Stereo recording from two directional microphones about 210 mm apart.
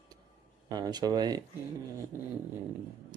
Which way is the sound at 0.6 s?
20° right (ahead or behind).